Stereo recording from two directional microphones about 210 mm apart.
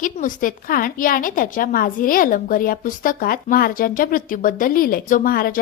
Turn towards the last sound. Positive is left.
turn(degrees=45)  # may be behind; listen again after turning